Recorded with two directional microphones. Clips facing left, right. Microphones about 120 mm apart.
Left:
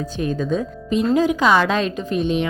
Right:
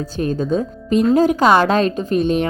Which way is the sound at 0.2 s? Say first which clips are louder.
Right 3 dB; 40° right (ahead or behind).